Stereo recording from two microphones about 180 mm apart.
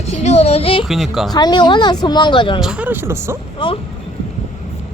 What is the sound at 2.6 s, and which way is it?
Speech, 5° right (ahead or behind).